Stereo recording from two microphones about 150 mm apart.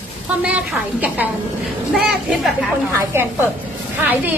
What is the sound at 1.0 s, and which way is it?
A woman's voice, 10° right (ahead or behind).